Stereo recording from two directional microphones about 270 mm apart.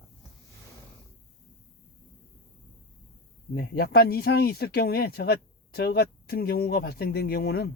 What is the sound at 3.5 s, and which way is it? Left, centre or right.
Speech, left.